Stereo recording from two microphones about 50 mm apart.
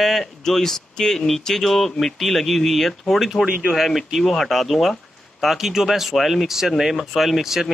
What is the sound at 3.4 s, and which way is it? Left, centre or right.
Speech, right.